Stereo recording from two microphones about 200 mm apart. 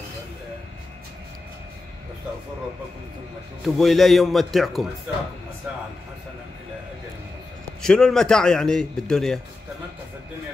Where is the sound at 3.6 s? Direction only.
Centre (ahead or behind).